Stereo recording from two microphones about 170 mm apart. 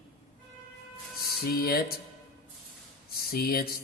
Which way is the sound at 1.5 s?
65° left (ahead or behind).